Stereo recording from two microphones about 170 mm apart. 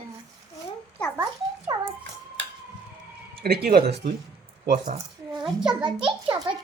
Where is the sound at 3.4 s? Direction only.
65° right (ahead or behind).